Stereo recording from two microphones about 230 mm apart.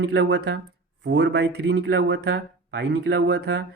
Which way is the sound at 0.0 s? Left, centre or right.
Right.